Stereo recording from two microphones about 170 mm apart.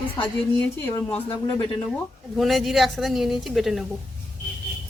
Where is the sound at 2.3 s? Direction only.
Centre (ahead or behind).